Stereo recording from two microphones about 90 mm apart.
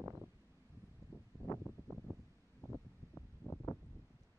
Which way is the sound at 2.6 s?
30° left (ahead or behind).